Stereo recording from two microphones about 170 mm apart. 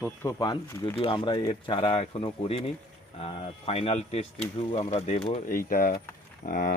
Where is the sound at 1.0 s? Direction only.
30° left (ahead or behind).